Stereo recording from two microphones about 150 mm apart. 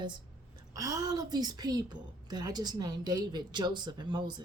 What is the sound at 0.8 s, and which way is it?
A woman's voice, 25° right (ahead or behind).